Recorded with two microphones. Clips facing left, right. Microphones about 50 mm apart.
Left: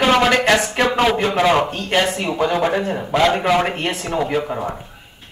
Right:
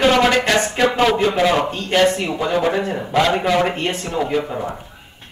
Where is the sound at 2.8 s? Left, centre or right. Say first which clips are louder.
Left 1 dB; centre.